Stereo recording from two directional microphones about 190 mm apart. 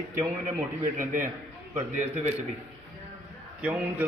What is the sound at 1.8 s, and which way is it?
Speech, 35° right (ahead or behind).